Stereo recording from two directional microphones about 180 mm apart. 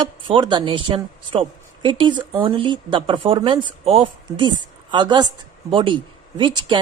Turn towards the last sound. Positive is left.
turn(degrees=-25)  # may be behind; listen again after turning